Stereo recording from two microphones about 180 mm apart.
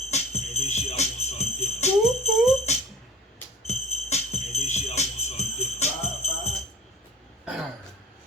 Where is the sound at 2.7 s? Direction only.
40° left (ahead or behind).